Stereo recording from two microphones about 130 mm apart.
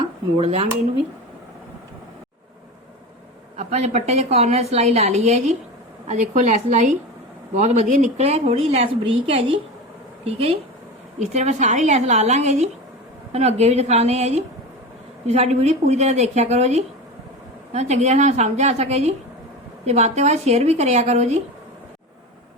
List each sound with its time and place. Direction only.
0.3 s a woman's voice: 50° right (ahead or behind)
3.6 s a woman's voice: 60° right (ahead or behind)
11.2 s a woman's voice: 60° right (ahead or behind)